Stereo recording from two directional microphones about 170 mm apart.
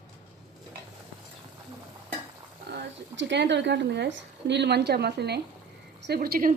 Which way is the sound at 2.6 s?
85° right.